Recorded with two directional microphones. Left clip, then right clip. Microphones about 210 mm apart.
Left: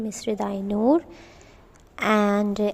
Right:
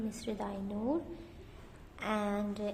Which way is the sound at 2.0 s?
35° left (ahead or behind).